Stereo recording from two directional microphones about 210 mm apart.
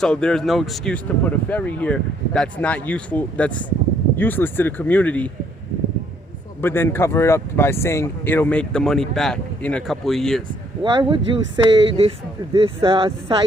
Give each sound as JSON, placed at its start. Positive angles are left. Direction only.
{"t": 0.0, "sound": "speech", "side_deg": 5}
{"t": 6.6, "sound": "speech", "side_deg": 10}
{"t": 10.9, "sound": "speech", "side_deg": -25}